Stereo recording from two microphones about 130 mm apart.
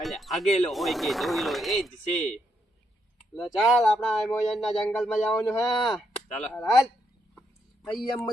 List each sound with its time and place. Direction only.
0.0 s a sound: centre (ahead or behind)
0.6 s speech: centre (ahead or behind)
3.4 s speech: centre (ahead or behind)
5.4 s speech: 20° left (ahead or behind)
5.6 s speech: centre (ahead or behind)